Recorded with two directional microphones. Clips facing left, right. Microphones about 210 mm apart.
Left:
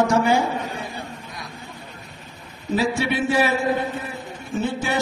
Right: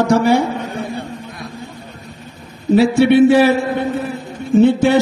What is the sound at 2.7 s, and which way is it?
Speech, 65° right (ahead or behind).